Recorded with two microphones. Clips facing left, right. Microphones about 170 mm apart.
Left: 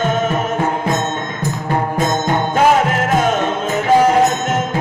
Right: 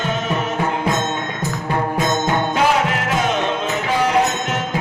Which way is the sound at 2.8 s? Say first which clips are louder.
Left 4 dB; 45° left (ahead or behind).